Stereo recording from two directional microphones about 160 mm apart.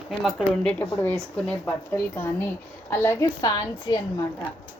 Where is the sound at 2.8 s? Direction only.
15° left (ahead or behind).